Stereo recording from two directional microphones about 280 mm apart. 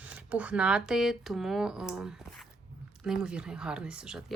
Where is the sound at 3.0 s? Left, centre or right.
Centre.